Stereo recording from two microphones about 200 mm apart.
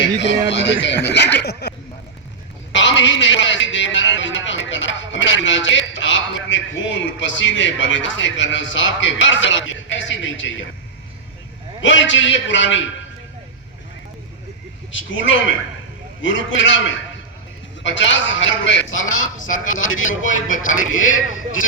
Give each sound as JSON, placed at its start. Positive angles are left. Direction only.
{"t": 0.2, "sound": "speech", "side_deg": 60}
{"t": 2.7, "sound": "a man's voice", "side_deg": 65}
{"t": 11.8, "sound": "a man's voice", "side_deg": 65}
{"t": 14.9, "sound": "a man's voice", "side_deg": 70}
{"t": 20.1, "sound": "speech", "side_deg": 40}
{"t": 20.9, "sound": "speech", "side_deg": 80}